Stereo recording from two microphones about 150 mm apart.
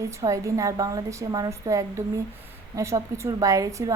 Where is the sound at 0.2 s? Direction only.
20° right (ahead or behind).